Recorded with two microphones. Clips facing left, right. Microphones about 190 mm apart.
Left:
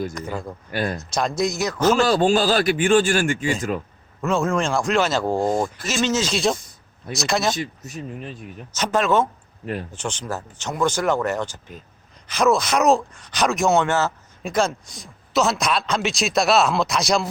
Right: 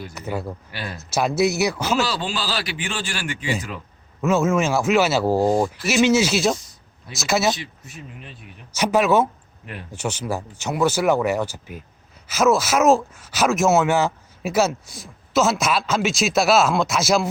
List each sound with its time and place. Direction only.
0.1 s speech: 5° right (ahead or behind)
0.7 s speech: 50° left (ahead or behind)
1.1 s speech: 5° right (ahead or behind)
2.0 s speech: 50° left (ahead or behind)
4.2 s speech: 5° right (ahead or behind)
7.5 s speech: 45° left (ahead or behind)
8.7 s speech: 10° right (ahead or behind)